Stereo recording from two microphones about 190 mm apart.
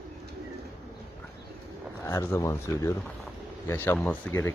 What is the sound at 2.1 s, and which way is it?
Speech, 15° left (ahead or behind).